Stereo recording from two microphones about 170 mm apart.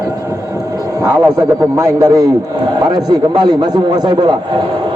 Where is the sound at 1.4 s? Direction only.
20° right (ahead or behind).